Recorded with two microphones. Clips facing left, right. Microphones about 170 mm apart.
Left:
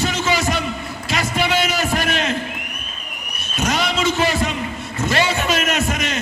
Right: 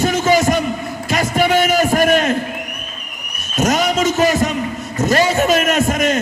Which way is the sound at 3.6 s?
45° right (ahead or behind).